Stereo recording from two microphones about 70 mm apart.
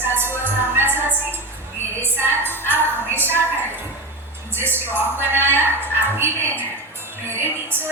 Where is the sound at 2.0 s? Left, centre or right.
Right.